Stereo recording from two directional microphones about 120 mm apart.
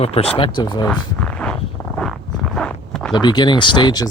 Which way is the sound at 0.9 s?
10° left (ahead or behind).